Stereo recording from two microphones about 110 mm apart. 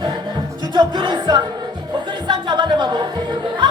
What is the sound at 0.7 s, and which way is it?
Music, 40° right (ahead or behind).